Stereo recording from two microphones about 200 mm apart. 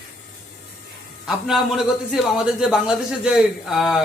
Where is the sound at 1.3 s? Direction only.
Centre (ahead or behind).